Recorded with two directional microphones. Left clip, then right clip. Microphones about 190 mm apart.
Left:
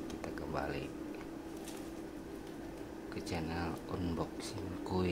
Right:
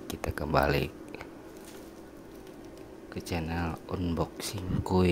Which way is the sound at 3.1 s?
40° right (ahead or behind).